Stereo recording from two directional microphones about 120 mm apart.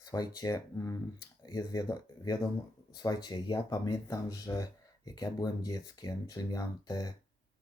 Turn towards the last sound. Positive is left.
turn(degrees=35)  # may be behind; listen again after turning